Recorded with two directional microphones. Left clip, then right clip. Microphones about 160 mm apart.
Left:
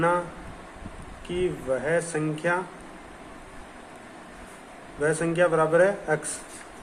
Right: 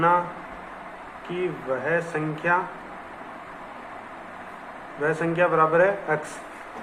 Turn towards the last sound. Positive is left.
turn(degrees=45)  # may be behind; listen again after turning